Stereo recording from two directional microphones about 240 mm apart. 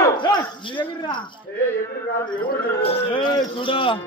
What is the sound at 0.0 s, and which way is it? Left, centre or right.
Dog, centre.